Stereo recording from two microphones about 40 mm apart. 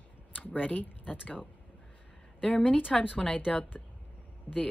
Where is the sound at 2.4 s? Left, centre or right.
Left.